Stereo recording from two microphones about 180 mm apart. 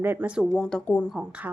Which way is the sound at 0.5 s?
5° left (ahead or behind).